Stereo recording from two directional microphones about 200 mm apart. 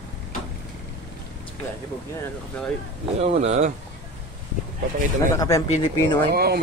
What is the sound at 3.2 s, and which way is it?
Speech, 35° right (ahead or behind).